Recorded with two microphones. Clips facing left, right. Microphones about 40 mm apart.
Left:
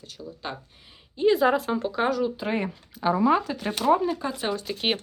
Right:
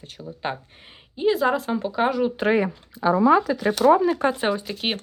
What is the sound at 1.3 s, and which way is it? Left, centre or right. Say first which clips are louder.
Speech: even; centre.